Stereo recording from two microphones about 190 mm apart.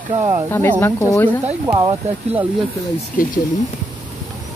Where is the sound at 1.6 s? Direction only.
20° right (ahead or behind).